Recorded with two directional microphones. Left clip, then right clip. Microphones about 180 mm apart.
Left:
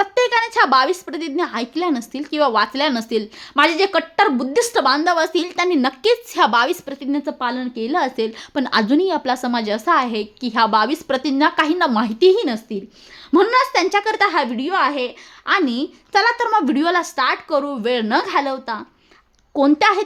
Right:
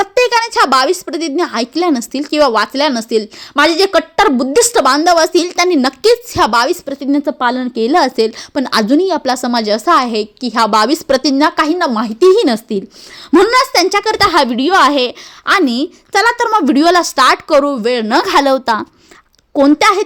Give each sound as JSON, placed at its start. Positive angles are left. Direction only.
{"t": 0.0, "sound": "a sound", "side_deg": -15}
{"t": 1.0, "sound": "speech", "side_deg": -15}
{"t": 8.4, "sound": "a woman's voice", "side_deg": -15}
{"t": 12.3, "sound": "a woman's voice", "side_deg": -35}
{"t": 13.3, "sound": "speech", "side_deg": -25}
{"t": 14.3, "sound": "a woman's voice", "side_deg": -35}
{"t": 17.8, "sound": "speech", "side_deg": -20}
{"t": 18.2, "sound": "a woman's voice", "side_deg": -40}
{"t": 19.5, "sound": "a woman's voice", "side_deg": -20}